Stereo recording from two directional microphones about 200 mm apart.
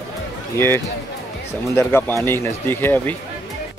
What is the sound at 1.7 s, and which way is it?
Speech, 10° left (ahead or behind).